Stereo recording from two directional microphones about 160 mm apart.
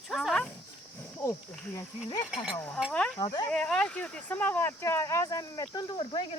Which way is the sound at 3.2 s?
25° left (ahead or behind).